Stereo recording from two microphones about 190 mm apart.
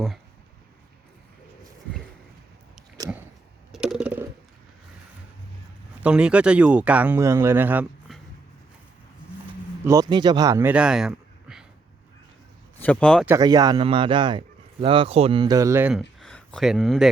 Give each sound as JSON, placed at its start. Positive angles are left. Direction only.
{"t": 3.7, "sound": "a sound", "side_deg": 0}
{"t": 6.0, "sound": "speech", "side_deg": -5}
{"t": 9.8, "sound": "speech", "side_deg": -20}
{"t": 12.8, "sound": "speech", "side_deg": 5}
{"t": 13.2, "sound": "a man's voice", "side_deg": -20}
{"t": 15.9, "sound": "speech", "side_deg": 0}